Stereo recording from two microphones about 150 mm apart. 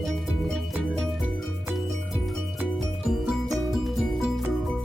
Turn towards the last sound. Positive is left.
turn(degrees=0)  # may be behind; listen again after turning